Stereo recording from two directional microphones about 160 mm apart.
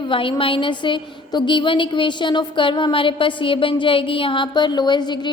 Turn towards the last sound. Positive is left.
turn(degrees=25)  # may be behind; listen again after turning